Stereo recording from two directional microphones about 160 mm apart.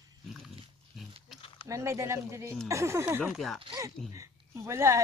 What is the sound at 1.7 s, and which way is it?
Speech, 20° right (ahead or behind).